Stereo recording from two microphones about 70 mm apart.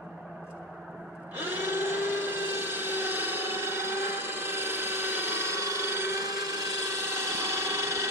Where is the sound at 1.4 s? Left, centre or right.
Right.